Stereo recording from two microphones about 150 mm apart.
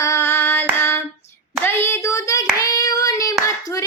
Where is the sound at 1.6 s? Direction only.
15° left (ahead or behind).